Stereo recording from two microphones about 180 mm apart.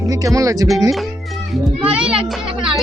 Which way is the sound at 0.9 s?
Centre (ahead or behind).